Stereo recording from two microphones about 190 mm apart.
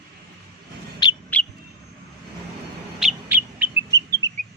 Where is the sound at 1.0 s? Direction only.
20° left (ahead or behind).